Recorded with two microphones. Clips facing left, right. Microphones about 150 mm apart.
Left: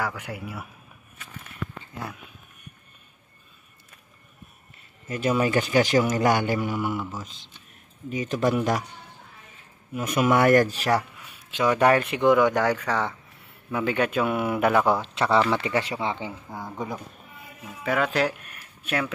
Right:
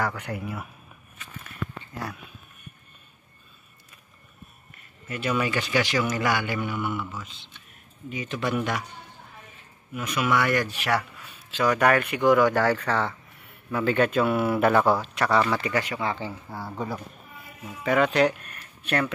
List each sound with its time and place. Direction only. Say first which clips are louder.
0.0 s speech: right 2 dB; 10° left (ahead or behind)
5.0 s speech: left 3 dB; 35° left (ahead or behind)
10.0 s speech: left 5 dB; 45° left (ahead or behind)
11.0 s a sound: left 1 dB; 10° left (ahead or behind)
11.6 s speech: left 1 dB; 25° left (ahead or behind); by 15.0 s 10° left (ahead or behind)
15.0 s speech: left 1 dB; 20° left (ahead or behind)
17.8 s speech: right 3 dB; centre (ahead or behind)